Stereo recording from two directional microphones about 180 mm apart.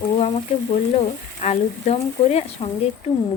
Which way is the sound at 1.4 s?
35° left (ahead or behind).